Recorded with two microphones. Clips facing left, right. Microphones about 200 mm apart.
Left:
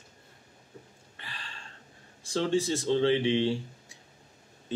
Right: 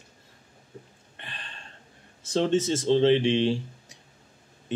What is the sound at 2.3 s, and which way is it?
Speech, 25° right (ahead or behind).